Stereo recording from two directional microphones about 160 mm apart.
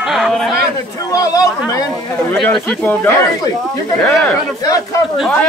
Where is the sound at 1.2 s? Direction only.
20° left (ahead or behind).